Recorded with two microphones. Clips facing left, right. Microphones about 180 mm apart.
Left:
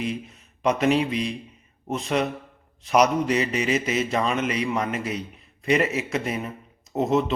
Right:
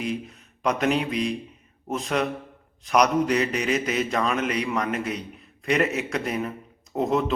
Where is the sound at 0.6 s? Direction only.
Centre (ahead or behind).